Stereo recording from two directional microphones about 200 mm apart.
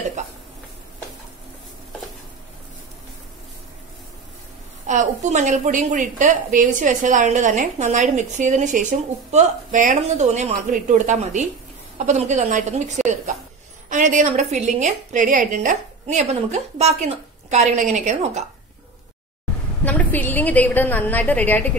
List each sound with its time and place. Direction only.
4.8 s a woman's voice: 35° right (ahead or behind)
19.8 s a woman's voice: 5° left (ahead or behind)